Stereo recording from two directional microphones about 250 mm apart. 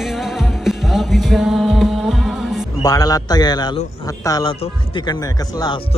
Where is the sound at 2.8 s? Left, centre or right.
Centre.